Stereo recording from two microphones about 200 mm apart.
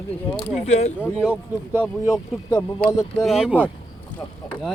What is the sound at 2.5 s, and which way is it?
Speech, 15° left (ahead or behind).